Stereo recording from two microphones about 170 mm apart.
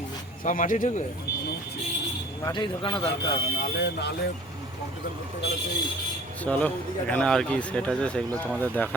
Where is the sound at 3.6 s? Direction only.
65° left (ahead or behind).